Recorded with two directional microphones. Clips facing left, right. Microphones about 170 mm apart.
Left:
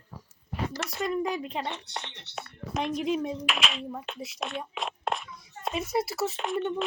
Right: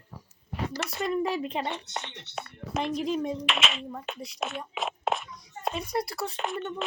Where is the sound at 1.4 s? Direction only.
20° right (ahead or behind).